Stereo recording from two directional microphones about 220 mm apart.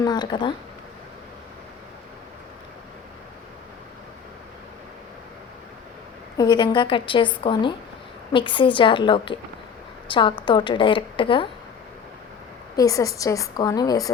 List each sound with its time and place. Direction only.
0.0 s speech: 20° left (ahead or behind)
6.3 s a woman's voice: 20° left (ahead or behind)
12.7 s a woman's voice: 15° left (ahead or behind)